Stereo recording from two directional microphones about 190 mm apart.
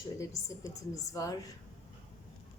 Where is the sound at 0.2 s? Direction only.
15° left (ahead or behind).